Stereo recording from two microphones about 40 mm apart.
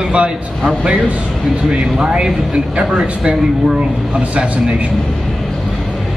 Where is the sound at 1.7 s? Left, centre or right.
Right.